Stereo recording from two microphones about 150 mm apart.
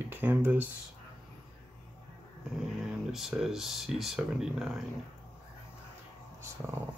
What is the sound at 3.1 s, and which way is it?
Speech, centre (ahead or behind).